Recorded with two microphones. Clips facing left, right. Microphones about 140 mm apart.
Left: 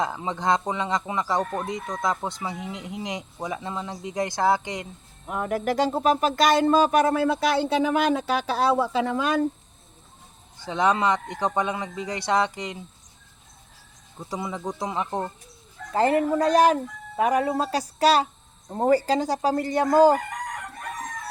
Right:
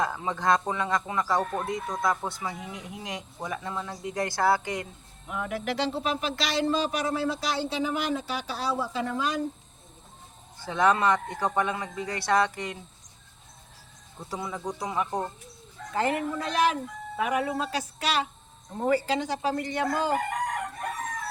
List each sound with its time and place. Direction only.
0.0 s speech: 20° left (ahead or behind)
5.3 s speech: 45° left (ahead or behind); by 9.3 s 90° left
10.7 s speech: 20° left (ahead or behind)
14.2 s speech: 20° left (ahead or behind)
15.9 s speech: 35° left (ahead or behind)